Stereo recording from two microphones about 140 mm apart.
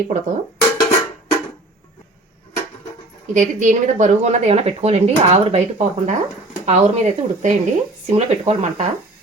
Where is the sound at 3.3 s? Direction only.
60° right (ahead or behind).